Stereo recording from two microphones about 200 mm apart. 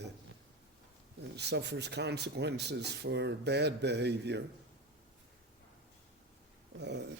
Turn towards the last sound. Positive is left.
turn(degrees=-60)  # may be behind; listen again after turning